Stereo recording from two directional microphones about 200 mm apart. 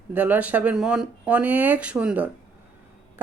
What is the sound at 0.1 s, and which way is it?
A woman's voice, 5° right (ahead or behind).